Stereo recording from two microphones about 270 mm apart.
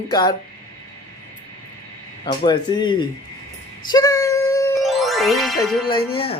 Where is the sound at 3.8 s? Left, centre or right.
Centre.